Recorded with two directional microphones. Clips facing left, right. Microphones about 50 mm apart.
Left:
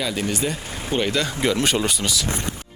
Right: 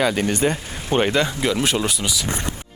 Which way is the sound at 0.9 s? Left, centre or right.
Right.